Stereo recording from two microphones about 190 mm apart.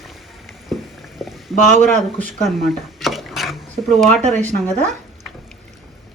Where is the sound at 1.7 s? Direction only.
40° right (ahead or behind).